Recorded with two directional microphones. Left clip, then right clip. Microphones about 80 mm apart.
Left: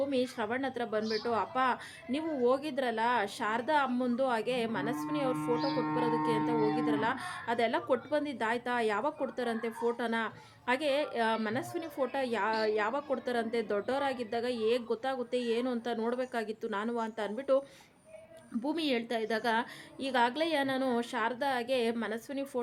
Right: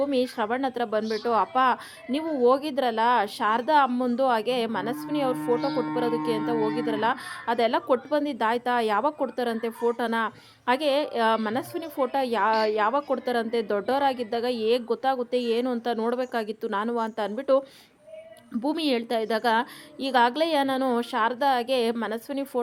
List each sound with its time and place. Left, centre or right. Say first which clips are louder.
0.0 s speech: right 7 dB; right
18.6 s speech: right 7 dB; right